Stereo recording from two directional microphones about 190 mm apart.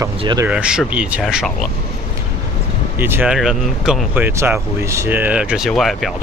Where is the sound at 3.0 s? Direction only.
10° right (ahead or behind).